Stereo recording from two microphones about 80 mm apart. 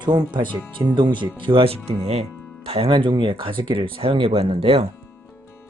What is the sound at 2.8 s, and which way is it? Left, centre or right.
Speech, right.